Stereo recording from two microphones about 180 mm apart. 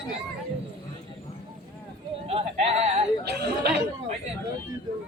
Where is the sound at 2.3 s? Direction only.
35° right (ahead or behind).